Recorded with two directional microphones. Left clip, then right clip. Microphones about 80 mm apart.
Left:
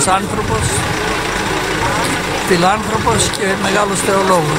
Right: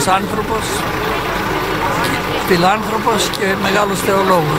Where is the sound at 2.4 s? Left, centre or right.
Centre.